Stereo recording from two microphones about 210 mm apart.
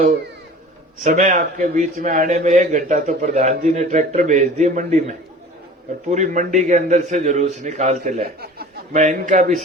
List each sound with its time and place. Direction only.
1.0 s a man's voice: 35° right (ahead or behind)